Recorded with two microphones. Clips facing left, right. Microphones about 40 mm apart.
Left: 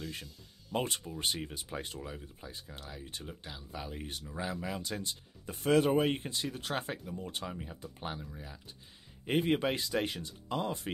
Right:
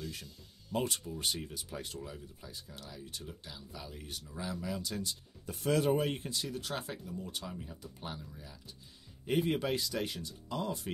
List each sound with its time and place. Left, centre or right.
0.7 s speech: left